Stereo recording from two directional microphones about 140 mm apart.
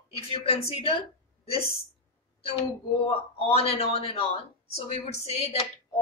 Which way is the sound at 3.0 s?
45° left (ahead or behind).